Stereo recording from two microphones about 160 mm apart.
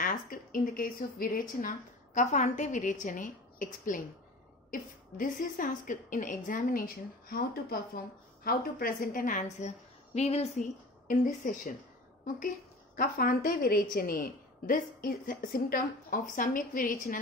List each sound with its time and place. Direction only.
0.0 s a woman's voice: 60° left (ahead or behind)
7.2 s a woman's voice: 70° left (ahead or behind); by 10.5 s 40° left (ahead or behind)
11.1 s a woman's voice: 60° left (ahead or behind)
12.9 s a woman's voice: 65° left (ahead or behind)